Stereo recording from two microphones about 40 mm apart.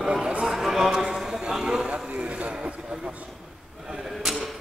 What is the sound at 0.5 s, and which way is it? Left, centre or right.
Clip-clop, centre.